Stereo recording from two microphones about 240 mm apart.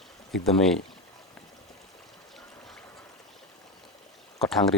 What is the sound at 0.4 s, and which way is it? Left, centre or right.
Speech, centre.